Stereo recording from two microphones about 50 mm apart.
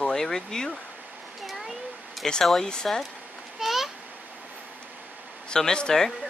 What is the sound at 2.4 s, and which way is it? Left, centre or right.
Speech, centre.